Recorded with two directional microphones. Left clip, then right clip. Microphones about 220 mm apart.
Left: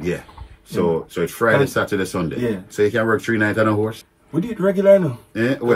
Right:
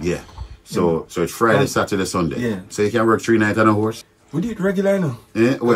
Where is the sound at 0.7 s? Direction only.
30° right (ahead or behind).